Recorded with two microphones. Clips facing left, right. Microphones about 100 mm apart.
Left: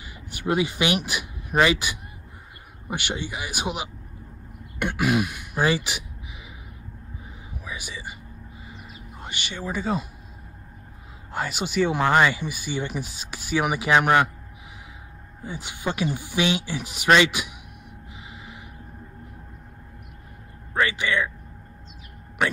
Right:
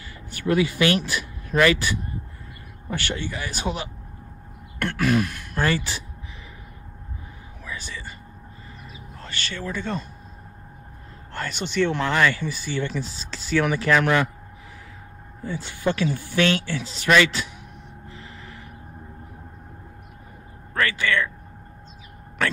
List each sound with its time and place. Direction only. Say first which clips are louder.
0.0 s speech: right 2 dB; 15° left (ahead or behind)
7.5 s whispering: even; 15° left (ahead or behind)
9.2 s speech: right 1 dB; 15° left (ahead or behind)
11.3 s speech: even; 5° left (ahead or behind)
15.4 s speech: right 4 dB; 15° left (ahead or behind)
20.8 s speech: right 1 dB; 20° left (ahead or behind)